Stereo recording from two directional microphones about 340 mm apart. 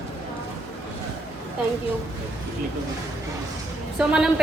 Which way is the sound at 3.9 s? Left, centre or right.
Centre.